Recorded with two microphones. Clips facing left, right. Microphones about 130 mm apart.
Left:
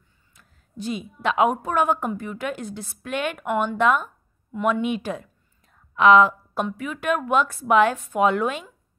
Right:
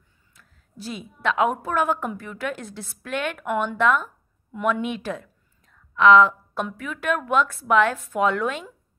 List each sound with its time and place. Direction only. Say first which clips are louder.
0.4 s a woman's voice: left 6 dB; centre (ahead or behind)